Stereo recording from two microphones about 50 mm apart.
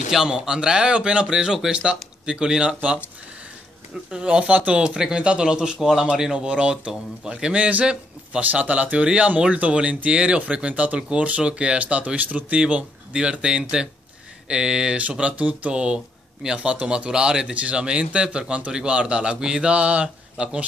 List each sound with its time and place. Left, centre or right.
0.1 s speech: centre
4.1 s speech: centre
8.4 s speech: right